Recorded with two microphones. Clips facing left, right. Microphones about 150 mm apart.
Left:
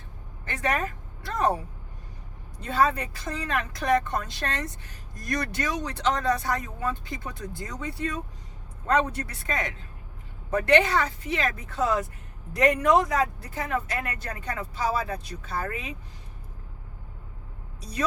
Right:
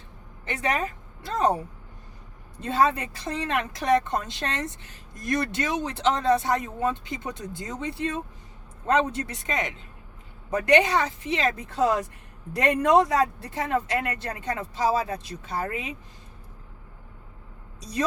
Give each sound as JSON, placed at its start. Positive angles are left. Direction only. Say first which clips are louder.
{"t": 0.4, "sound": "speech", "louder": "right 1 dB", "side_deg": -15}
{"t": 2.6, "sound": "speech", "louder": "right 1 dB", "side_deg": -25}